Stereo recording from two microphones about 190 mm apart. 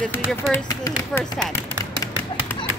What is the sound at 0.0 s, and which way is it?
Speech, 10° left (ahead or behind).